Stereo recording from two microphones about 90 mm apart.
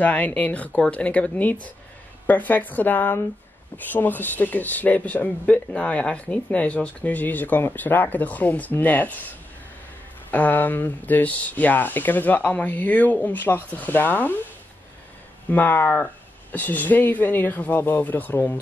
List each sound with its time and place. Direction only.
0.0 s speech: 15° left (ahead or behind)
10.3 s speech: 20° left (ahead or behind)
15.5 s speech: 20° left (ahead or behind)